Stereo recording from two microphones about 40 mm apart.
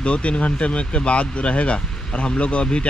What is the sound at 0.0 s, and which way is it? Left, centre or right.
Speech, left.